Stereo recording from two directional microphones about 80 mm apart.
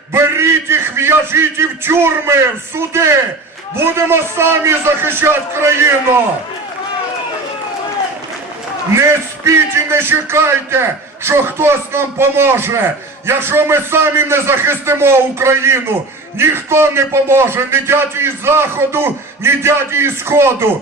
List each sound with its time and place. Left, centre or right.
0.1 s a man's voice: right
9.5 s a man's voice: right